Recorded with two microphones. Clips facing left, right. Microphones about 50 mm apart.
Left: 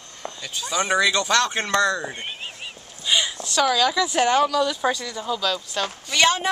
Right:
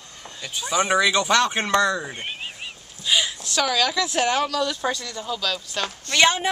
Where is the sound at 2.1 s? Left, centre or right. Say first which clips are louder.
Right 1 dB; centre.